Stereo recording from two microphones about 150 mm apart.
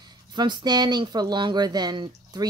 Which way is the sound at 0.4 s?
30° right (ahead or behind).